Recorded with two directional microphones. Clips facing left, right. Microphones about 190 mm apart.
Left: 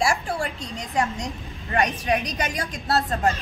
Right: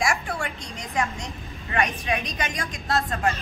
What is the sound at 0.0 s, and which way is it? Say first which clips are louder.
A woman's voice: left 3 dB; 30° left (ahead or behind).